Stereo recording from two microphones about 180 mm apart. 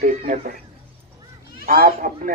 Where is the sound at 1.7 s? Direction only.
55° right (ahead or behind).